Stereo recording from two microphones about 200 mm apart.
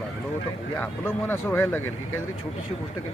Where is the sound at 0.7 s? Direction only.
10° left (ahead or behind).